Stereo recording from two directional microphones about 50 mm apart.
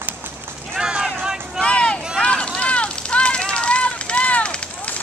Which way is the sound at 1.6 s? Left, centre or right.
Left.